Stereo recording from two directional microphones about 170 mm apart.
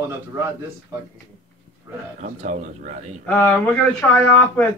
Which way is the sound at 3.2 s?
10° left (ahead or behind).